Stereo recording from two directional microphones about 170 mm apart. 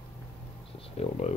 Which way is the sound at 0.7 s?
35° left (ahead or behind).